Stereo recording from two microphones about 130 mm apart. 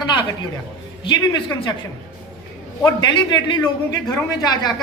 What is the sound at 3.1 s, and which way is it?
Speech, 35° left (ahead or behind).